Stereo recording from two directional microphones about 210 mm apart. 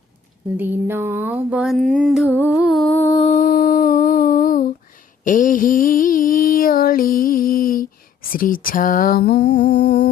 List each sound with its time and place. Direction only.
0.5 s a sound: 10° right (ahead or behind)
2.4 s humming: 5° right (ahead or behind)
3.2 s humming: 35° left (ahead or behind)
5.2 s mantra: 40° left (ahead or behind)
8.3 s lullaby: 40° left (ahead or behind)